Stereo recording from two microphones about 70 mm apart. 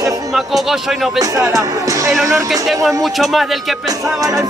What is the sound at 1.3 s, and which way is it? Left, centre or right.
Speech, right.